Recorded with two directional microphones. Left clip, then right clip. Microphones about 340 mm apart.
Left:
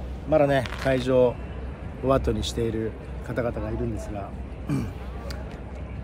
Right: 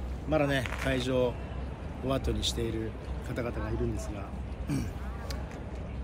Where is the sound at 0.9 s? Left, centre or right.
Centre.